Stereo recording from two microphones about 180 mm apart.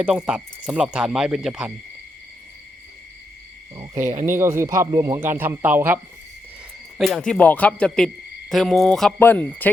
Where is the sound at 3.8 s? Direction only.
15° right (ahead or behind).